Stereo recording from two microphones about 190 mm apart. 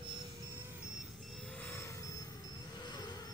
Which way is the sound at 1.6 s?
10° left (ahead or behind).